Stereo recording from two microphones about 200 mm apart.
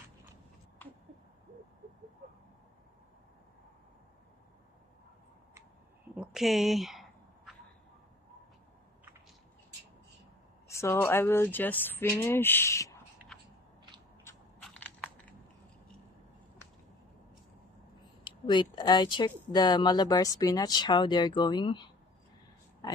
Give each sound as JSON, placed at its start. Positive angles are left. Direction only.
{"t": 6.1, "sound": "a sound", "side_deg": -5}
{"t": 10.7, "sound": "speech", "side_deg": 15}
{"t": 14.2, "sound": "crushing", "side_deg": 5}
{"t": 18.2, "sound": "speech", "side_deg": 25}